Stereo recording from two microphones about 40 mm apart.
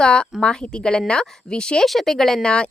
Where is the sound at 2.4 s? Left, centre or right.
Left.